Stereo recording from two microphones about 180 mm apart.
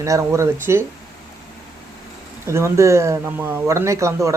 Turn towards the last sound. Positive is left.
turn(degrees=-15)  # may be behind; listen again after turning